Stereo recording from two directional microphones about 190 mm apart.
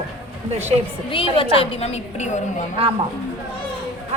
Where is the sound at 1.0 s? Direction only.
25° left (ahead or behind).